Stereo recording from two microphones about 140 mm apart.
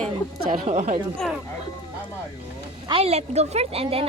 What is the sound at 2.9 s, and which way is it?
Speech, 45° right (ahead or behind).